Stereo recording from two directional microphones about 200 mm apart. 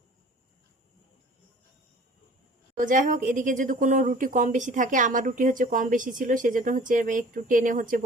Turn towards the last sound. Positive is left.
turn(degrees=-40)  # may be behind; listen again after turning